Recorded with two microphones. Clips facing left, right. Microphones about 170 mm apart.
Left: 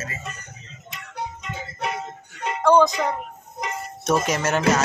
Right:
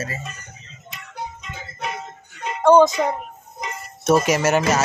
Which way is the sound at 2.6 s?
20° right (ahead or behind).